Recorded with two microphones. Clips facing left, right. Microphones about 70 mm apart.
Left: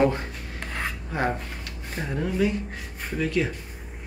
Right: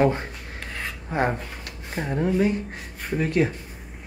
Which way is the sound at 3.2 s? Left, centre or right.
Right.